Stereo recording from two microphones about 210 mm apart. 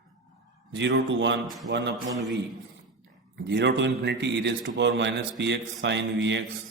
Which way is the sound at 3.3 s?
55° right (ahead or behind).